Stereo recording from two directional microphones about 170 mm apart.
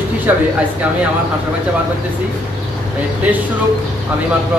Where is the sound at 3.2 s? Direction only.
10° right (ahead or behind).